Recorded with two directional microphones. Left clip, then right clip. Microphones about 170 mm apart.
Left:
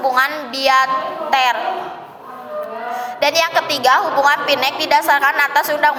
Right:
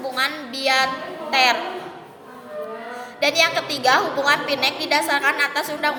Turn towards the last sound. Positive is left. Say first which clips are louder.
# left 8 dB
turn(degrees=-15)  # may be behind; listen again after turning